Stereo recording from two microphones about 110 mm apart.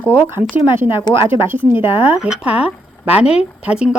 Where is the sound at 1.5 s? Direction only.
20° right (ahead or behind).